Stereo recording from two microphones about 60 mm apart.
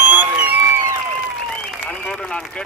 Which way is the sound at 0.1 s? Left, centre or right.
Right.